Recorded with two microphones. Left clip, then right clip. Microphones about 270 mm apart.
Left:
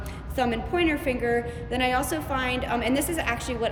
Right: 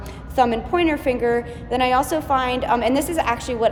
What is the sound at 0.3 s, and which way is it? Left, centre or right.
A woman's voice, centre.